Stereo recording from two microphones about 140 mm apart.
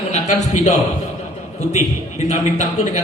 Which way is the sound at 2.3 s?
60° left (ahead or behind).